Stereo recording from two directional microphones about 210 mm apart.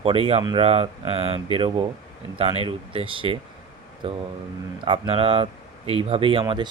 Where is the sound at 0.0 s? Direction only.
25° right (ahead or behind).